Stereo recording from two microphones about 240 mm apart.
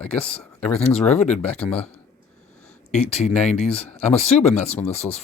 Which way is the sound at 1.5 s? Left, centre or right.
Centre.